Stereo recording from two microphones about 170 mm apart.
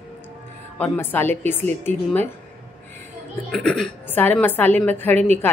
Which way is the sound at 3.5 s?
5° left (ahead or behind).